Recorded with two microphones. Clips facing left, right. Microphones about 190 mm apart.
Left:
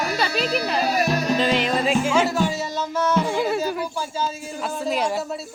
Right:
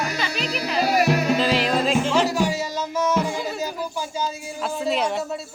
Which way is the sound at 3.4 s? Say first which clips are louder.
Left 5 dB; 65° left (ahead or behind).